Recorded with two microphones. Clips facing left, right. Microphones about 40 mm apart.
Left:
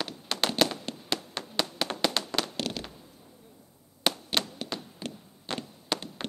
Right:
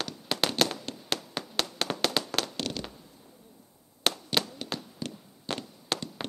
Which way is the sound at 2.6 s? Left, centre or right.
Centre.